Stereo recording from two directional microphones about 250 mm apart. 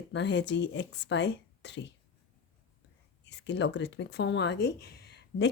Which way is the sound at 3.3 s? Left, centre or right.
Left.